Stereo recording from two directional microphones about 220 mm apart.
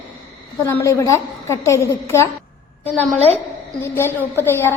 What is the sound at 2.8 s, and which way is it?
Speech, 30° left (ahead or behind).